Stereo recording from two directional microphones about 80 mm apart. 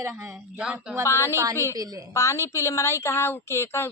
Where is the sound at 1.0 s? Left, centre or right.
Left.